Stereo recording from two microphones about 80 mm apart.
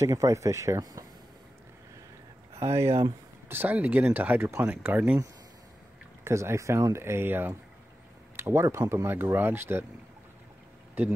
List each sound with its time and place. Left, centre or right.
0.0 s speech: right
2.5 s speech: right
3.7 s speech: centre
6.2 s speech: right